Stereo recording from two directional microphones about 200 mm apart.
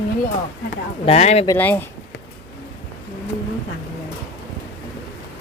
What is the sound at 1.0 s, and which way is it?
Speech, 35° left (ahead or behind).